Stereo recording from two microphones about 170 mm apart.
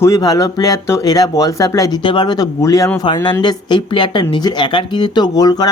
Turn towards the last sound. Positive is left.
turn(degrees=20)  # may be behind; listen again after turning